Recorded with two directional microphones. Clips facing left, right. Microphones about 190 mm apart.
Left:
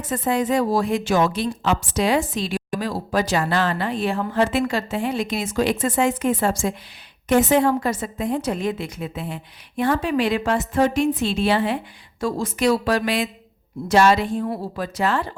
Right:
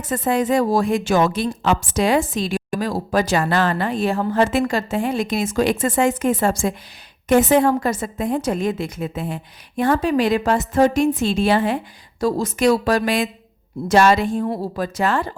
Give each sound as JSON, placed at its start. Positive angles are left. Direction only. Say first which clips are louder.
{"t": 0.1, "sound": "a woman's voice", "louder": "right 2 dB", "side_deg": -50}